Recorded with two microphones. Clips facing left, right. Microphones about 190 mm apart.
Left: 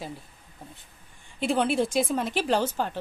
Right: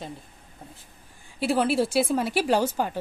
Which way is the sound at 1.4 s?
5° right (ahead or behind).